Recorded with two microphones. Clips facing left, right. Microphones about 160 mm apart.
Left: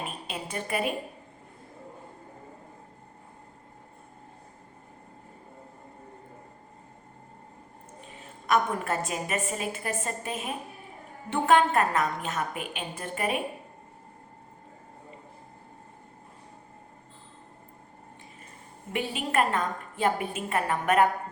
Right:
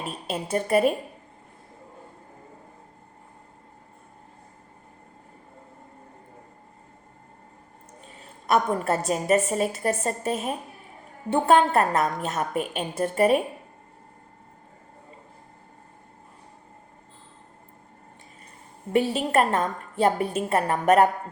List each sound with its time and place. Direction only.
0.3 s a woman's voice: 40° right (ahead or behind)
8.2 s a woman's voice: 40° right (ahead or behind)
18.9 s a woman's voice: 40° right (ahead or behind)